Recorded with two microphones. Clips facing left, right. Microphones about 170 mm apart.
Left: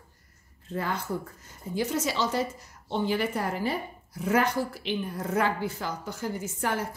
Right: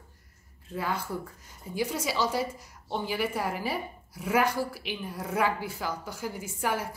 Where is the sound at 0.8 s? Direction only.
10° right (ahead or behind).